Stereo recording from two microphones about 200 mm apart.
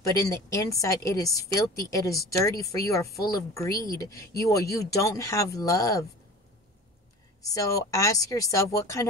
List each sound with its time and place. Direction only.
0.0 s a woman's voice: 15° left (ahead or behind)
7.5 s a woman's voice: 15° left (ahead or behind)